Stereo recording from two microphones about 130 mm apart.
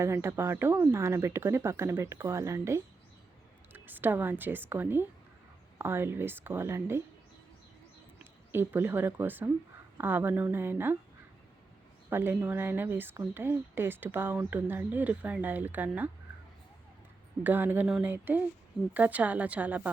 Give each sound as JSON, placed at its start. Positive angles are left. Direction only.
{"t": 0.0, "sound": "speech", "side_deg": -20}
{"t": 8.2, "sound": "speech", "side_deg": -15}
{"t": 12.1, "sound": "speech", "side_deg": -15}
{"t": 17.4, "sound": "speech", "side_deg": -15}
{"t": 17.8, "sound": "speech", "side_deg": -5}
{"t": 18.1, "sound": "speech", "side_deg": -15}